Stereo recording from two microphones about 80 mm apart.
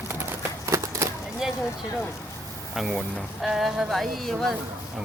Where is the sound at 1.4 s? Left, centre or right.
Centre.